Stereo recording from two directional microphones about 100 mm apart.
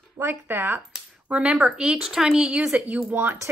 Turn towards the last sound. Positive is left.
turn(degrees=-20)  # may be behind; listen again after turning